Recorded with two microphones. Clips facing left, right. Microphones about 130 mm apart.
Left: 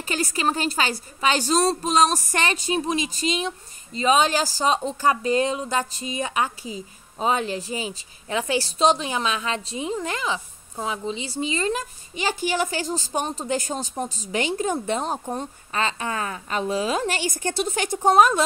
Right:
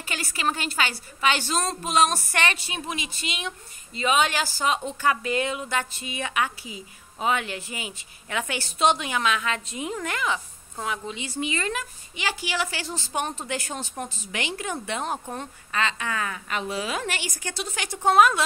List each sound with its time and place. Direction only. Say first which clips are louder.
0.1 s a woman's voice: left 4 dB; 35° left (ahead or behind)
17.3 s a woman's voice: left 8 dB; 45° left (ahead or behind)